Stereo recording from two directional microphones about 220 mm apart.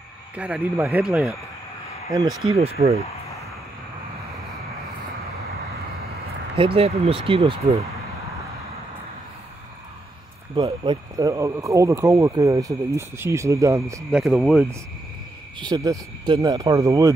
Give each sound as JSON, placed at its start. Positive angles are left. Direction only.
{"t": 0.4, "sound": "speech", "side_deg": -5}
{"t": 2.1, "sound": "speech", "side_deg": -15}
{"t": 2.5, "sound": "speech", "side_deg": -25}
{"t": 6.5, "sound": "speech", "side_deg": -25}
{"t": 10.5, "sound": "speech", "side_deg": -25}
{"t": 14.2, "sound": "speech", "side_deg": 0}
{"t": 15.6, "sound": "speech", "side_deg": -15}